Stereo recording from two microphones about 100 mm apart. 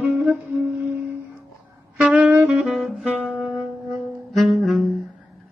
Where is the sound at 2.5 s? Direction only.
Centre (ahead or behind).